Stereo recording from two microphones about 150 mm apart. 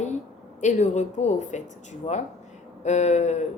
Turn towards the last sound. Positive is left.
turn(degrees=50)  # may be behind; listen again after turning